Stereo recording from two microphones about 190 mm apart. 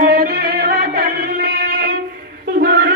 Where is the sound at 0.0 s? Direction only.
55° right (ahead or behind).